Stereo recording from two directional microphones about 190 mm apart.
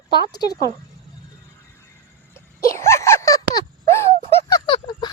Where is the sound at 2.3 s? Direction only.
15° left (ahead or behind).